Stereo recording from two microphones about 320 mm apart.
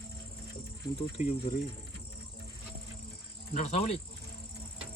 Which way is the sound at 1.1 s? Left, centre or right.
Left.